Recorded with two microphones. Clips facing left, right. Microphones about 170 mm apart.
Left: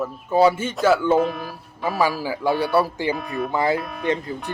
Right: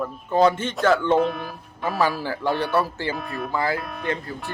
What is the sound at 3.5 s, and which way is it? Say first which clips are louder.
Speech: left 3 dB; 20° left (ahead or behind).